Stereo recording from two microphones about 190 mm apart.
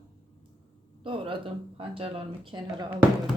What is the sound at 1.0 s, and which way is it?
Speech, 25° right (ahead or behind).